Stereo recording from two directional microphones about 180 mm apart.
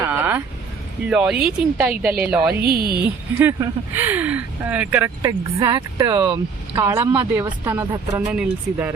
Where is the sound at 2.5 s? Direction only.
60° right (ahead or behind).